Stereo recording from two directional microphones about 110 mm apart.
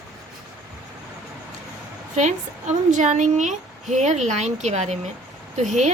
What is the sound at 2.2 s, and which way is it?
Speech, 90° right.